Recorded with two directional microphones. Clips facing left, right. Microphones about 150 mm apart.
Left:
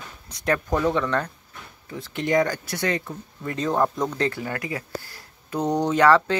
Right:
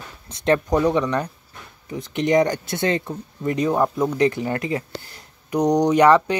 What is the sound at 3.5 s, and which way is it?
Speech, 10° right (ahead or behind).